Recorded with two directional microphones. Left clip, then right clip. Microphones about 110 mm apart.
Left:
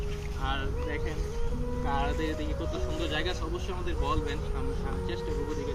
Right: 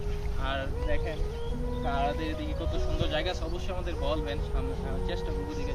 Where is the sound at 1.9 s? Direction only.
45° right (ahead or behind).